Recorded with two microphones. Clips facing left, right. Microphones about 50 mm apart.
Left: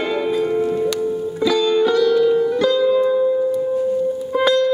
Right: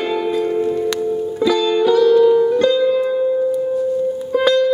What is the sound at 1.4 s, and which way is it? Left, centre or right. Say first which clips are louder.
Music: right 1 dB; centre.